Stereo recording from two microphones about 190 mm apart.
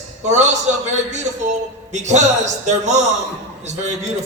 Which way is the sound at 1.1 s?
40° right (ahead or behind).